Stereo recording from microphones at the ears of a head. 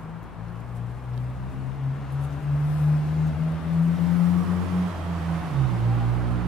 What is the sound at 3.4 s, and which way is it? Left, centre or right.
Vehicle, left.